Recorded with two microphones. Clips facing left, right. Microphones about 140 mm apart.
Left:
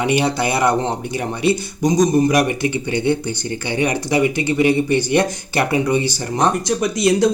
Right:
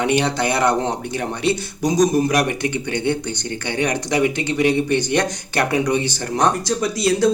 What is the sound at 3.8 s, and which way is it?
Speech, 5° left (ahead or behind).